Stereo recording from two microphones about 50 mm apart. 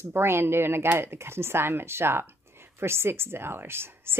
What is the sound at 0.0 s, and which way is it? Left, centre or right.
A woman's voice, right.